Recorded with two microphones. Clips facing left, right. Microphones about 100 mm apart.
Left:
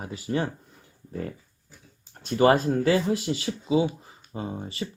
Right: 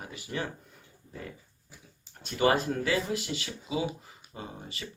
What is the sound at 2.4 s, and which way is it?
Speech, 35° left (ahead or behind).